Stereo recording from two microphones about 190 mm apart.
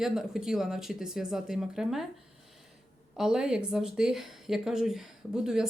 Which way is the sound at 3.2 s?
5° right (ahead or behind).